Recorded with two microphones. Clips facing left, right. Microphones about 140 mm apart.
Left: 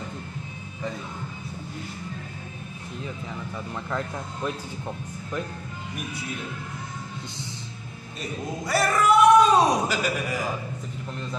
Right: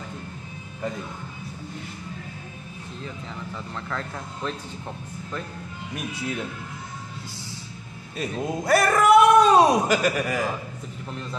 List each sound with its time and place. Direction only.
3.5 s speech: 15° left (ahead or behind)
8.6 s speech: 55° right (ahead or behind)